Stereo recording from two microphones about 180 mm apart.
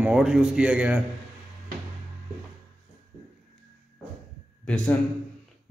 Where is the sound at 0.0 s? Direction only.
5° right (ahead or behind).